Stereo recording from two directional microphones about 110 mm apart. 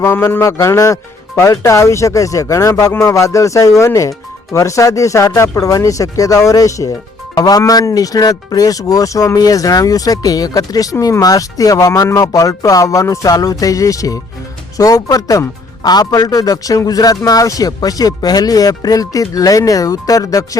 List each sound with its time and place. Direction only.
0.0 s a man's voice: 25° left (ahead or behind)